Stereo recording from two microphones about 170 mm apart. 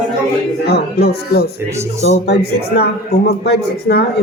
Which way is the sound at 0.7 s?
70° left (ahead or behind).